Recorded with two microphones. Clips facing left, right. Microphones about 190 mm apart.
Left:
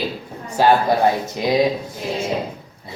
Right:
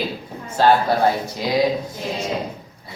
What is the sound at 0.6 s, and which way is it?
Speech, 15° left (ahead or behind).